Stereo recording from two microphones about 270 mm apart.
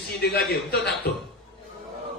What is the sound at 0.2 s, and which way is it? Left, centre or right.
Speech, left.